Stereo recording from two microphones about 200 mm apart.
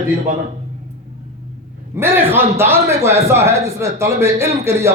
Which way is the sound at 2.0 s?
10° right (ahead or behind).